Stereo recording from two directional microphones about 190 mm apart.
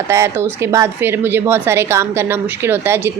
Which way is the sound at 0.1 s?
15° right (ahead or behind).